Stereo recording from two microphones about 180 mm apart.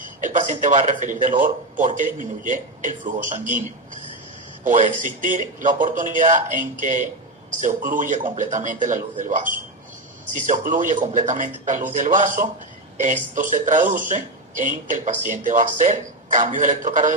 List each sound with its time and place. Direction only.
0.2 s speech: 45° right (ahead or behind)
4.6 s speech: 45° right (ahead or behind)